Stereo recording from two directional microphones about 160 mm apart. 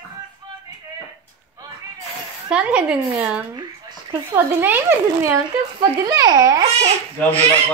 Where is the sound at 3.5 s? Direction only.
25° right (ahead or behind).